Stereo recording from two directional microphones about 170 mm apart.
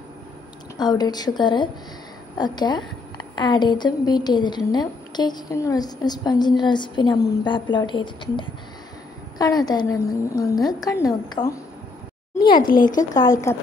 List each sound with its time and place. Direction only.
0.7 s a woman's voice: 25° left (ahead or behind)
12.5 s speech: 55° left (ahead or behind)
12.9 s a woman's voice: 20° left (ahead or behind)